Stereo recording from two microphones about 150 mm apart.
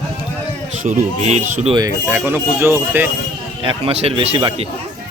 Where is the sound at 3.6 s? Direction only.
35° right (ahead or behind).